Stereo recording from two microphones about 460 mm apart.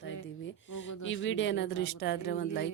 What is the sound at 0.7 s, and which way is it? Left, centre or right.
A woman's voice, left.